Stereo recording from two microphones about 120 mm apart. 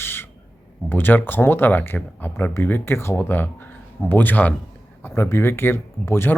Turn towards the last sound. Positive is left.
turn(degrees=20)  # may be behind; listen again after turning